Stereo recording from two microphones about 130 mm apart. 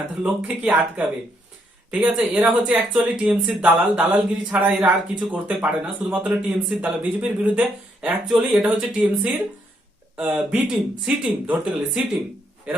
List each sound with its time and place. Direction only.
0.2 s a man's voice: 10° right (ahead or behind)